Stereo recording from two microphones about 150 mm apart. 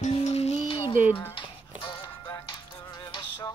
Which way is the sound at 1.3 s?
35° left (ahead or behind).